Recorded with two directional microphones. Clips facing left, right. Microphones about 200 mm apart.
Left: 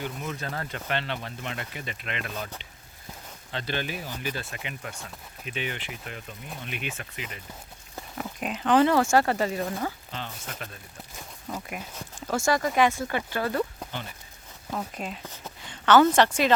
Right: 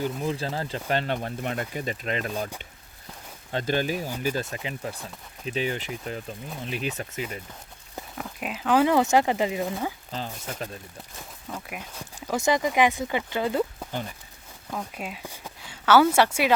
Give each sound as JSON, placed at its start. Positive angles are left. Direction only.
{"t": 0.0, "sound": "speech", "side_deg": -30}
{"t": 3.5, "sound": "speech", "side_deg": -45}
{"t": 8.2, "sound": "speech", "side_deg": -5}
{"t": 10.1, "sound": "speech", "side_deg": -35}
{"t": 11.4, "sound": "speech", "side_deg": 0}
{"t": 14.9, "sound": "speech", "side_deg": -5}